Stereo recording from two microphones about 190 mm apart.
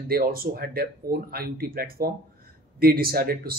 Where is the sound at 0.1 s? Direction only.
50° right (ahead or behind).